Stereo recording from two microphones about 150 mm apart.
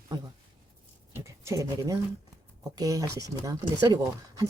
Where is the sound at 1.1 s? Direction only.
20° right (ahead or behind).